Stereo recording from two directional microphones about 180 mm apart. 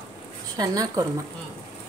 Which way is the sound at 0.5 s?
20° right (ahead or behind).